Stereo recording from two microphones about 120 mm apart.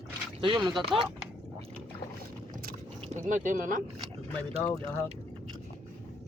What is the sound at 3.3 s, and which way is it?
Speech, 90° right.